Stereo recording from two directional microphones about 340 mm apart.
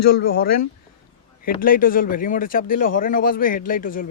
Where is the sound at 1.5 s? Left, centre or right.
Left.